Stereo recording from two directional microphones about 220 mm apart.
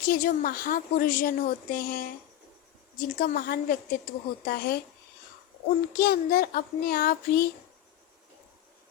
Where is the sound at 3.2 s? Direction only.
40° left (ahead or behind).